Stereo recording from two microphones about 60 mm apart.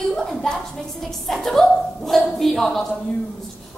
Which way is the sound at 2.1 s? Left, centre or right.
Centre.